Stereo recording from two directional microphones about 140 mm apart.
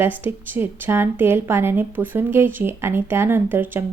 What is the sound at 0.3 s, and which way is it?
A woman's voice, 15° right (ahead or behind).